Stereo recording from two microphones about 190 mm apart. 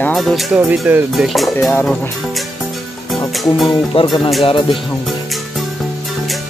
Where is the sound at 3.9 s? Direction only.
30° left (ahead or behind).